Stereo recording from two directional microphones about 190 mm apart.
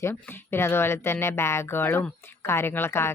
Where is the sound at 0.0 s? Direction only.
15° left (ahead or behind).